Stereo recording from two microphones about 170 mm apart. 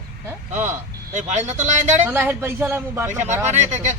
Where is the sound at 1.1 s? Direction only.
45° right (ahead or behind).